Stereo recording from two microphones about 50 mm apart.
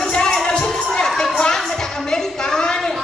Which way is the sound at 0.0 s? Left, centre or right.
Centre.